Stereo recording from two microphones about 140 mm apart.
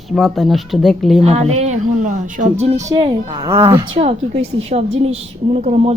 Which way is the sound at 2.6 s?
55° right (ahead or behind).